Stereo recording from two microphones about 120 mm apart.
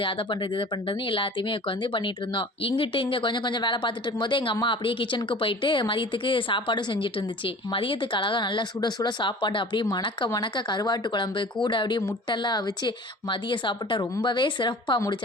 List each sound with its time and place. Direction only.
0.0 s a woman's voice: 45° left (ahead or behind)